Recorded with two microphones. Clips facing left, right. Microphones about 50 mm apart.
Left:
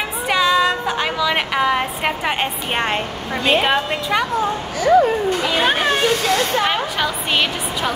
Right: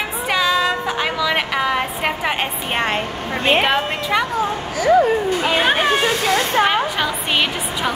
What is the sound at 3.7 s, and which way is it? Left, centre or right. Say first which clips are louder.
Speech: even; centre.